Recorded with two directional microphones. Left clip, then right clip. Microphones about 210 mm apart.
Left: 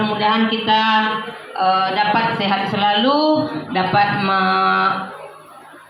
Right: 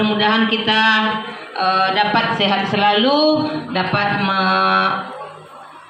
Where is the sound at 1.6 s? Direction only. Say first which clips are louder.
Even; 30° right (ahead or behind).